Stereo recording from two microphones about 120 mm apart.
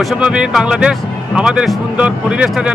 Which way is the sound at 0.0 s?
5° right (ahead or behind).